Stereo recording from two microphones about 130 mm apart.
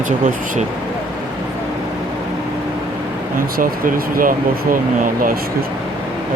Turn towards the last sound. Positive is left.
turn(degrees=-90)